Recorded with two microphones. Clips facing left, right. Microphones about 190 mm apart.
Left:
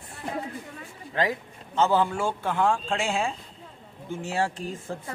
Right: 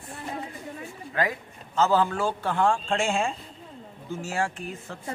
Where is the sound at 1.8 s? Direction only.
15° left (ahead or behind).